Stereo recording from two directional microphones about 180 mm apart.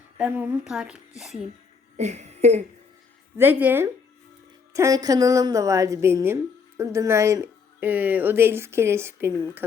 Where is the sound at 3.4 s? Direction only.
10° right (ahead or behind).